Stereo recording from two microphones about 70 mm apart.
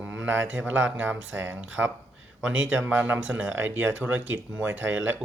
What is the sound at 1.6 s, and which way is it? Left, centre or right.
Speech, centre.